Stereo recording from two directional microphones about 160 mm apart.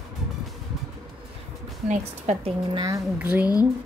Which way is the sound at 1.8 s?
45° right (ahead or behind).